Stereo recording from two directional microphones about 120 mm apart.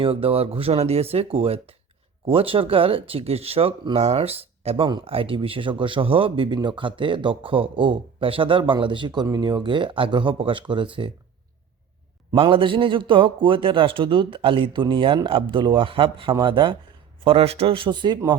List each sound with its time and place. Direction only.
0.0 s speech: 50° right (ahead or behind)
12.3 s speech: 45° right (ahead or behind)
17.2 s speech: 55° right (ahead or behind); by 18.2 s 40° right (ahead or behind)